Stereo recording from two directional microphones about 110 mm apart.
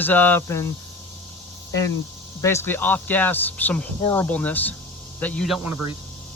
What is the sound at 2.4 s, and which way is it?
A man's voice, 25° left (ahead or behind).